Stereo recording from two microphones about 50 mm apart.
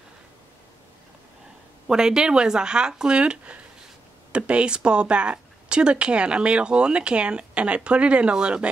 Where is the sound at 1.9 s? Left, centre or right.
Centre.